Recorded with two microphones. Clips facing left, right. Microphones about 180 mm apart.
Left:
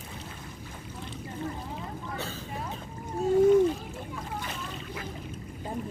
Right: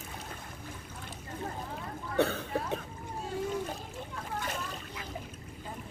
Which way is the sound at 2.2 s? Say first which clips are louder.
Right 8 dB; 60° right (ahead or behind).